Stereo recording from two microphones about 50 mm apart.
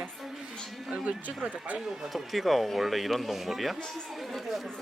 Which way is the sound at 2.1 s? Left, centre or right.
Centre.